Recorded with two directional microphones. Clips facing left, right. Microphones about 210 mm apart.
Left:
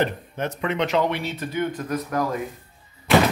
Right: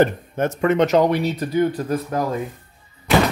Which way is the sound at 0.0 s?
45° right (ahead or behind).